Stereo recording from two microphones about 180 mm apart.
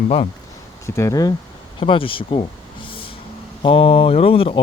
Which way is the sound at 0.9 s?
20° left (ahead or behind).